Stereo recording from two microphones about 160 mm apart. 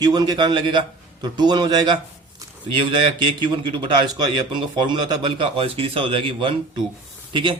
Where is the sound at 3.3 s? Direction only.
30° right (ahead or behind).